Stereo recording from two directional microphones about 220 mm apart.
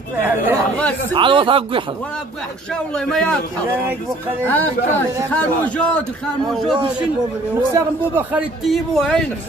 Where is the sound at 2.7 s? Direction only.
5° left (ahead or behind).